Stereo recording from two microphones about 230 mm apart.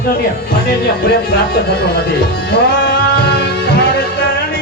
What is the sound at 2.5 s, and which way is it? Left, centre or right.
Music, left.